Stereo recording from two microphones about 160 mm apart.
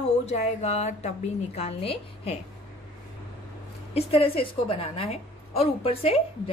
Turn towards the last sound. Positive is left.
turn(degrees=40)  # may be behind; listen again after turning